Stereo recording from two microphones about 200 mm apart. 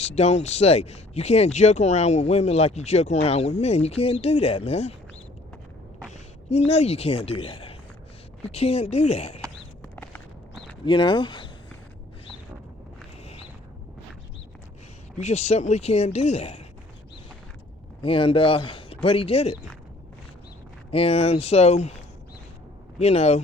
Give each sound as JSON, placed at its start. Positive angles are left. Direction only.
{"t": 0.1, "sound": "speech", "side_deg": 35}
{"t": 6.5, "sound": "speech", "side_deg": 30}
{"t": 9.8, "sound": "walk", "side_deg": 10}
{"t": 10.8, "sound": "speech", "side_deg": 25}
{"t": 15.2, "sound": "speech", "side_deg": 35}
{"t": 18.0, "sound": "speech", "side_deg": 25}
{"t": 20.9, "sound": "speech", "side_deg": 30}